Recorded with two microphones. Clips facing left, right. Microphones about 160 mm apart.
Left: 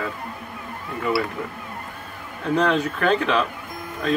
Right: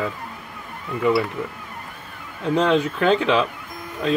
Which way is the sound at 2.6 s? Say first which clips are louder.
Right 2 dB; 20° right (ahead or behind).